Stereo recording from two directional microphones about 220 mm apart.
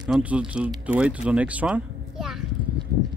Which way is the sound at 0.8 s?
5° right (ahead or behind).